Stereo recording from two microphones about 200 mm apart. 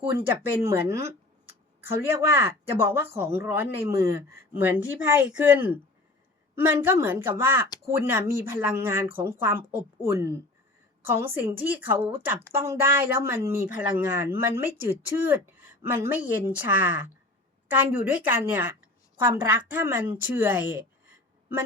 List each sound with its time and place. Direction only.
0.0 s a woman's voice: 10° right (ahead or behind)